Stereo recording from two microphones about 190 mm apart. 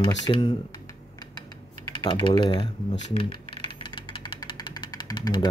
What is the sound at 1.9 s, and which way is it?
Speech, 25° left (ahead or behind).